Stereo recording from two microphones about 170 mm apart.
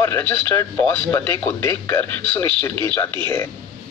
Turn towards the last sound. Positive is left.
turn(degrees=15)  # may be behind; listen again after turning